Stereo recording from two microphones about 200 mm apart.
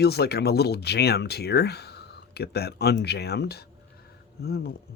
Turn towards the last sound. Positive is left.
turn(degrees=50)  # may be behind; listen again after turning